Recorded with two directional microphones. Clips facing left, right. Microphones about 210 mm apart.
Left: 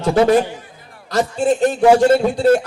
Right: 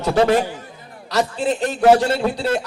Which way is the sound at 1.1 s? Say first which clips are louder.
Left 3 dB; 45° left (ahead or behind).